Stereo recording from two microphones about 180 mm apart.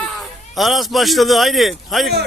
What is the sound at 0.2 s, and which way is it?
A man's voice, centre (ahead or behind).